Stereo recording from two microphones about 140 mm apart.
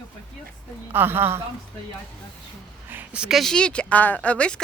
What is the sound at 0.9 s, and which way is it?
Speech, 15° right (ahead or behind).